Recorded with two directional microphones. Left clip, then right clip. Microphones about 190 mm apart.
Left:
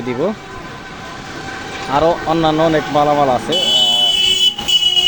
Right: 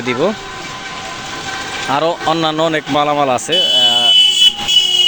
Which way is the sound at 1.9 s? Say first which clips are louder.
Left 1 dB; 10° right (ahead or behind).